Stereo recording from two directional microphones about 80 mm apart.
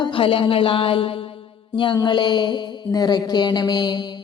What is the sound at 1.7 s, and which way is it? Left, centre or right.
Mantra, left.